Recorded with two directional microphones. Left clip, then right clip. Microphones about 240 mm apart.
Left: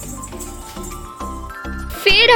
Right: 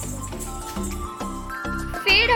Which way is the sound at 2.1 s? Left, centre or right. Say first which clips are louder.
Left 6 dB; left.